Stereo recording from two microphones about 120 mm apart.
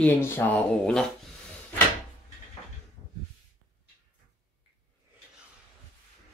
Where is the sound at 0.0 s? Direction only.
15° left (ahead or behind).